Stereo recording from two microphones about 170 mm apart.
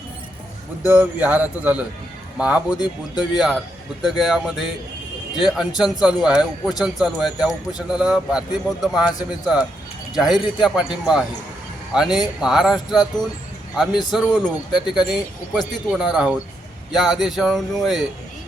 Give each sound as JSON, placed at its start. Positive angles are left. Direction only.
{"t": 0.9, "sound": "speech", "side_deg": -10}
{"t": 2.7, "sound": "speech", "side_deg": 25}
{"t": 3.3, "sound": "a man's voice", "side_deg": 0}
{"t": 14.1, "sound": "a man's voice", "side_deg": -5}